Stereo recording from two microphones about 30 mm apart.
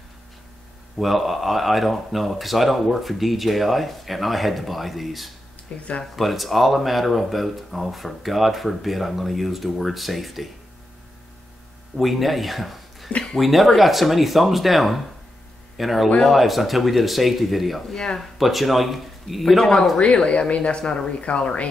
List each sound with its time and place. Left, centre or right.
0.9 s speech: centre
5.7 s speech: left
6.1 s speech: centre
12.0 s speech: centre
17.9 s speech: centre
18.4 s speech: centre
19.5 s speech: centre
20.2 s speech: left